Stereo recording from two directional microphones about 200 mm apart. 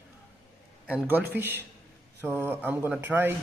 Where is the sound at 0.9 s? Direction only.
10° right (ahead or behind).